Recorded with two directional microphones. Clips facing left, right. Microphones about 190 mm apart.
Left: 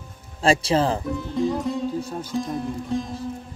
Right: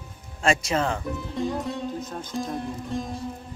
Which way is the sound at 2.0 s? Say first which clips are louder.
Left 4 dB; 10° left (ahead or behind).